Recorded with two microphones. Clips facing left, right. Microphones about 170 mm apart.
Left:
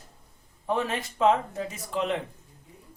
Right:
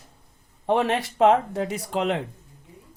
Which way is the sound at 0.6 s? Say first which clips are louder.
Right 6 dB; 75° right (ahead or behind).